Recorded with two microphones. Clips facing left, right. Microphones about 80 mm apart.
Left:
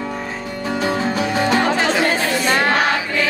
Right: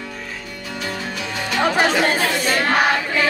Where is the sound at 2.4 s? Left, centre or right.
Left.